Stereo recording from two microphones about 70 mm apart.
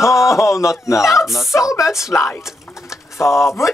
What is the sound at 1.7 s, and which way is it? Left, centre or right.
Speech, left.